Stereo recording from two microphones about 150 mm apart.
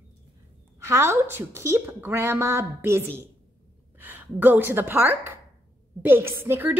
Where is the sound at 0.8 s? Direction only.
15° right (ahead or behind).